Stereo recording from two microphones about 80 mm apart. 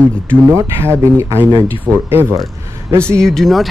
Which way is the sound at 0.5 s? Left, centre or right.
Right.